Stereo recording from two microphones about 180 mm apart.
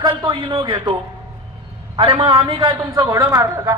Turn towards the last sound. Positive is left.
turn(degrees=-15)  # may be behind; listen again after turning